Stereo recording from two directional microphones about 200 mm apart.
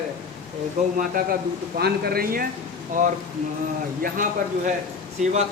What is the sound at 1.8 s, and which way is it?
A man's voice, 50° right (ahead or behind).